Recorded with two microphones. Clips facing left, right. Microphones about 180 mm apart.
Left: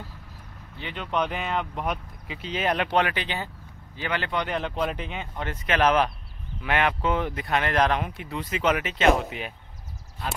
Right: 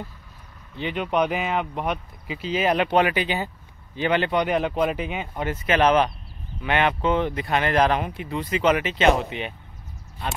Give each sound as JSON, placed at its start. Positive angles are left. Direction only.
{"t": 0.7, "sound": "speech", "side_deg": -15}
{"t": 3.9, "sound": "speech", "side_deg": -20}